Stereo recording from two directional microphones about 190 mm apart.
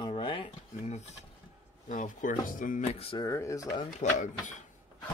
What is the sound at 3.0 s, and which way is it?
Speech, 30° left (ahead or behind).